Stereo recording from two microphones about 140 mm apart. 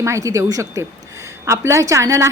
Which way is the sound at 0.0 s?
20° right (ahead or behind).